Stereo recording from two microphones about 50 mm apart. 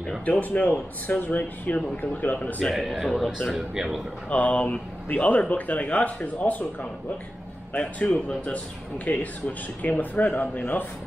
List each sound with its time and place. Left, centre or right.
0.2 s speech: left
2.3 s speech: left
2.7 s speech: centre
3.7 s speech: centre
4.3 s speech: left
7.7 s speech: left